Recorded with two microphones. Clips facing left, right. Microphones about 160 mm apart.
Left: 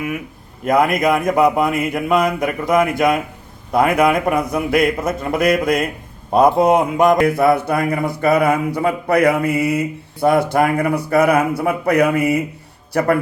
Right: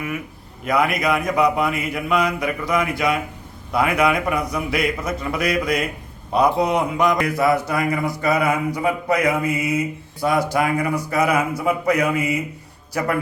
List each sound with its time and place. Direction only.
0.6 s a man's voice: 45° left (ahead or behind)